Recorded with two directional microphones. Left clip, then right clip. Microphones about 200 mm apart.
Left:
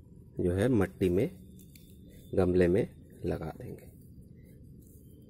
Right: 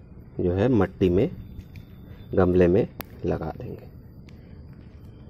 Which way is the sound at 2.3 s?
10° left (ahead or behind).